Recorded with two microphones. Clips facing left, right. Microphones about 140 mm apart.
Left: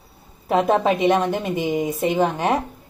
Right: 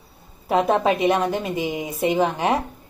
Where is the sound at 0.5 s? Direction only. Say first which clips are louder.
Left 1 dB; centre (ahead or behind).